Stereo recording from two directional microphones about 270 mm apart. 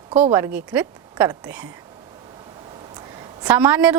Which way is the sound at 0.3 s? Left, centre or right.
Centre.